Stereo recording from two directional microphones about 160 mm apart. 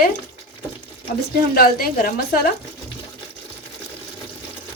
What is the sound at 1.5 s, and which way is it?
Speech, 70° left (ahead or behind).